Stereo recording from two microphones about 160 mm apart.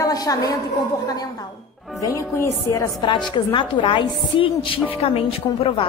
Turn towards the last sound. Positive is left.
turn(degrees=35)  # may be behind; listen again after turning